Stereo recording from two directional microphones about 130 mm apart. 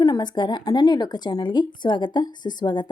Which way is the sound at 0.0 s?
30° left (ahead or behind).